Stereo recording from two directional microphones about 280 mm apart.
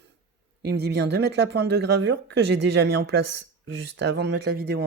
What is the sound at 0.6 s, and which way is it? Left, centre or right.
Speech, right.